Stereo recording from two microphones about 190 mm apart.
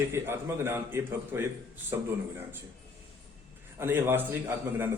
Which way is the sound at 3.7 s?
10° right (ahead or behind).